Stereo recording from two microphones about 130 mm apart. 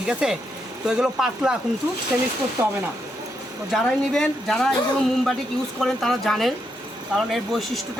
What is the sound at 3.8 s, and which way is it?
Speech, centre (ahead or behind).